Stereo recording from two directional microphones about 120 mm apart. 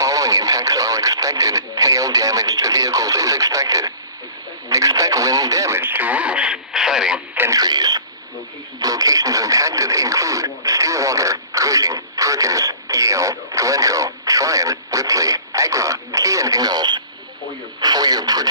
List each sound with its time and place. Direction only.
0.0 s speech: 30° right (ahead or behind); by 7.2 s 5° right (ahead or behind)
7.5 s speech: 35° right (ahead or behind)